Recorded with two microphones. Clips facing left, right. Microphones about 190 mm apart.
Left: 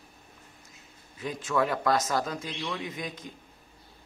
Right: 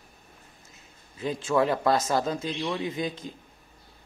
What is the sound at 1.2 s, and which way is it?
Speech, 30° right (ahead or behind).